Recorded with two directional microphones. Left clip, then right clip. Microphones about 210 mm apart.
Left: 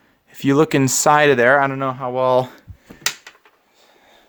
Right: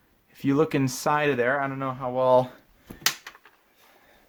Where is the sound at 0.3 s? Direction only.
45° left (ahead or behind).